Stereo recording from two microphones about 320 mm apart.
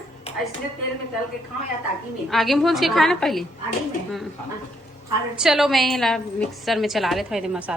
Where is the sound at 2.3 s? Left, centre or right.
Centre.